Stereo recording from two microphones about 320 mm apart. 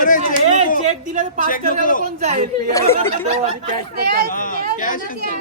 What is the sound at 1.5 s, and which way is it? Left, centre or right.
Speech, left.